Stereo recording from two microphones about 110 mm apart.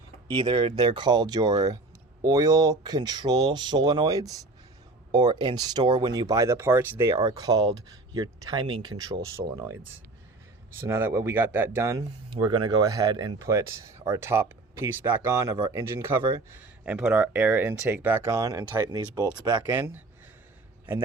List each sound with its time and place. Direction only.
0.3 s speech: 50° right (ahead or behind); by 7.2 s 20° right (ahead or behind)
7.3 s speech: 35° right (ahead or behind)
9.3 s speech: 25° right (ahead or behind)
11.9 s speech: 40° right (ahead or behind); by 16.2 s 20° right (ahead or behind)
16.8 s speech: 10° right (ahead or behind); by 19.6 s 35° right (ahead or behind)
19.6 s a man's voice: 20° right (ahead or behind)